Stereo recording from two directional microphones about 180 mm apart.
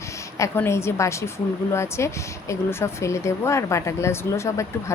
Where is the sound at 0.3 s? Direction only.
15° left (ahead or behind).